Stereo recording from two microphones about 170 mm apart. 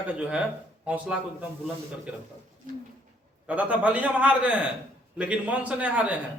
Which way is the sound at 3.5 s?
10° right (ahead or behind).